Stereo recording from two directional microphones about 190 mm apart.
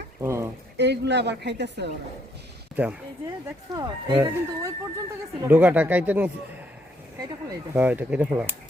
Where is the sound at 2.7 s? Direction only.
5° right (ahead or behind).